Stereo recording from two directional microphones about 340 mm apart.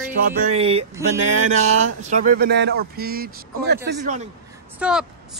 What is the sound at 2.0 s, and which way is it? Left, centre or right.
A man's voice, right.